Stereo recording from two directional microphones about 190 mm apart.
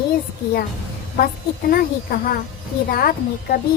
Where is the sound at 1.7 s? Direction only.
50° left (ahead or behind).